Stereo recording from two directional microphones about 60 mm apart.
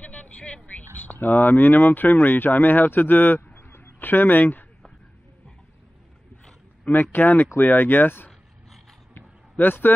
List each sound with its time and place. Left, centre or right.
0.0 s vehicle: left
0.9 s speech: left
6.9 s speech: left
9.1 s a sound: left